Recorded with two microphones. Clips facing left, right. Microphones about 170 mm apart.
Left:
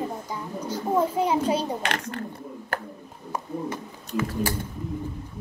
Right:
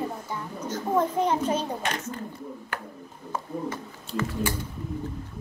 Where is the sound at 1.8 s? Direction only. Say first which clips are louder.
Left 2 dB; 75° left (ahead or behind).